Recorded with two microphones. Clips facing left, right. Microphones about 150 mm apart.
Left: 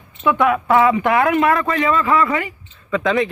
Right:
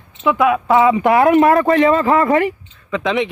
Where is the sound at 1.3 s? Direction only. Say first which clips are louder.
Right 5 dB; 40° right (ahead or behind).